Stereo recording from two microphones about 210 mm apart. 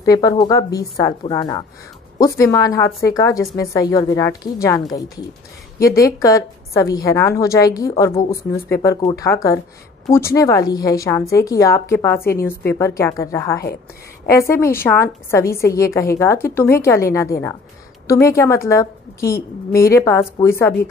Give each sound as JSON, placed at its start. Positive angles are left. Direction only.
{"t": 0.0, "sound": "a woman's voice", "side_deg": 15}
{"t": 6.2, "sound": "a woman's voice", "side_deg": 15}